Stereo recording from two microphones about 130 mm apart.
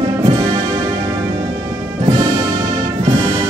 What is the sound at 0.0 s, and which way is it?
Music, 45° right (ahead or behind).